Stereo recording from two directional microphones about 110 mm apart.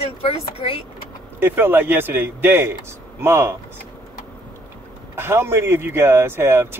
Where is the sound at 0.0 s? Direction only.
65° left (ahead or behind).